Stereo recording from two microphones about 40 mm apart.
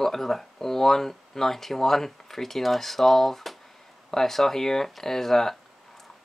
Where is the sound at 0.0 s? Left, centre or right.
Centre.